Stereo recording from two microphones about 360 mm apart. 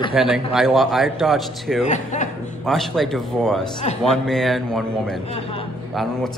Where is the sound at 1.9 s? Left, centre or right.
Centre.